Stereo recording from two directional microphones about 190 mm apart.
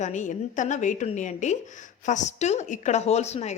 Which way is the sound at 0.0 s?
40° left (ahead or behind).